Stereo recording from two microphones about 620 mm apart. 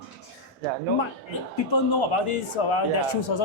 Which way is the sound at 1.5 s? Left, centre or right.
Left.